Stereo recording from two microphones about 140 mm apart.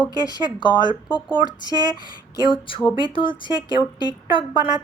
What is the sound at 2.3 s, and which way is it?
Speech, 30° left (ahead or behind).